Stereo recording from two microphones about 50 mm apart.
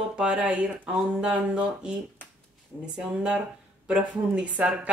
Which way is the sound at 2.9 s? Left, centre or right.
Centre.